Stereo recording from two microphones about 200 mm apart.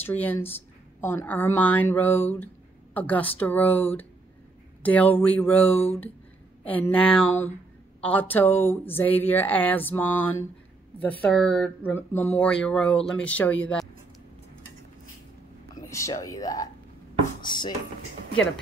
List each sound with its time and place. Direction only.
0.0 s speech: 10° left (ahead or behind)
15.7 s speech: 15° left (ahead or behind)